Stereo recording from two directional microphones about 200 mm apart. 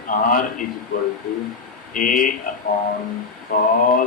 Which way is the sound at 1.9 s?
40° left (ahead or behind).